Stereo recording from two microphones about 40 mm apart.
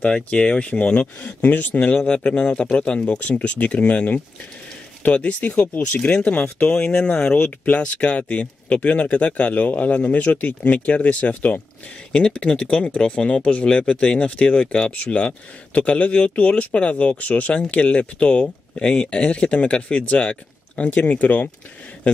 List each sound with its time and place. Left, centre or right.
0.0 s speech: left
1.8 s speech: left
12.1 s speech: left
18.4 s speech: left